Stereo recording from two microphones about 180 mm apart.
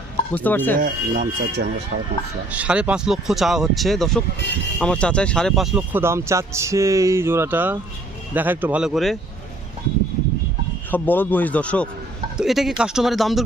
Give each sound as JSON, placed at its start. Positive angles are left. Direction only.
{"t": 0.3, "sound": "a man's voice", "side_deg": 10}
{"t": 0.8, "sound": "speech", "side_deg": -50}
{"t": 2.5, "sound": "speech", "side_deg": -5}
{"t": 5.7, "sound": "speech", "side_deg": -10}
{"t": 10.9, "sound": "a man's voice", "side_deg": 10}